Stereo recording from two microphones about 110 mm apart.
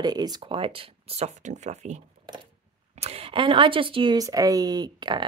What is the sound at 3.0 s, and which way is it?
Speech, 65° right (ahead or behind).